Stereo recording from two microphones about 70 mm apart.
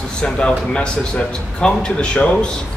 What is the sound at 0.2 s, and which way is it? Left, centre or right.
A man's voice, centre.